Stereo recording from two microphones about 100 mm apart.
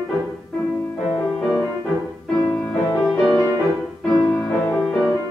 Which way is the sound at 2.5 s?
30° left (ahead or behind).